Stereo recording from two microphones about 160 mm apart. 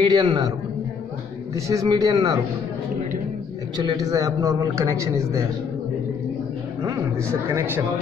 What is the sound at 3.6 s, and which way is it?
A man's voice, 25° right (ahead or behind).